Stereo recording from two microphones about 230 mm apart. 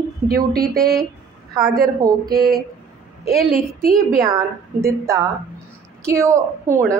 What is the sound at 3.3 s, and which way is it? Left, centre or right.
Speech, centre.